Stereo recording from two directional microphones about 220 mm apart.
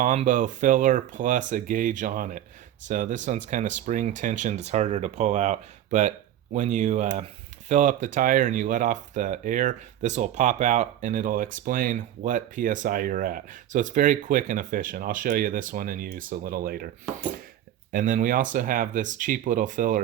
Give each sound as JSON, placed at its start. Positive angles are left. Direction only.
{"t": 0.0, "sound": "speech", "side_deg": -35}
{"t": 17.9, "sound": "speech", "side_deg": -35}